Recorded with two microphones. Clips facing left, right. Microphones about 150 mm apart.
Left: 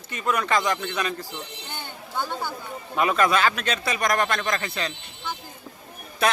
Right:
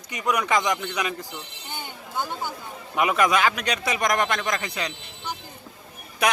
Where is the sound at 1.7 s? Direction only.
15° right (ahead or behind).